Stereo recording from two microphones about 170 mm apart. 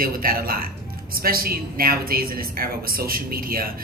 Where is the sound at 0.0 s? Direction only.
60° right (ahead or behind).